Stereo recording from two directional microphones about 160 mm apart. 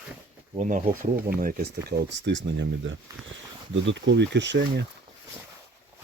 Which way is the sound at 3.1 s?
20° right (ahead or behind).